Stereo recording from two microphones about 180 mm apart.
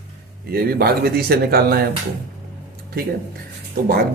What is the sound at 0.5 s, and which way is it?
Speech, 60° right (ahead or behind).